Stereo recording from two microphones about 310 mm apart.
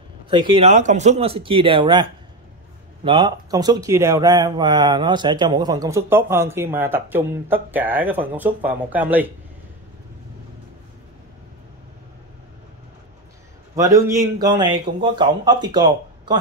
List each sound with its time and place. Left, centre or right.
0.3 s speech: centre
13.7 s speech: centre